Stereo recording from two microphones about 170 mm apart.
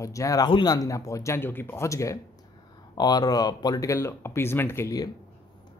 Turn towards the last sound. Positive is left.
turn(degrees=20)  # may be behind; listen again after turning